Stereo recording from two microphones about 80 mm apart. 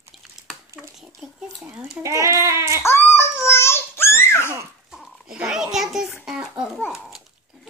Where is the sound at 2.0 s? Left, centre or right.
Right.